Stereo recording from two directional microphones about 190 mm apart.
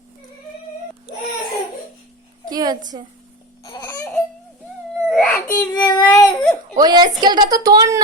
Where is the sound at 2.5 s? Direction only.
20° right (ahead or behind).